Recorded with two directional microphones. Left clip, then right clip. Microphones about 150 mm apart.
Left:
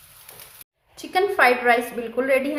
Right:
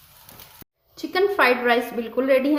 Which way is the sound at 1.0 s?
70° right (ahead or behind).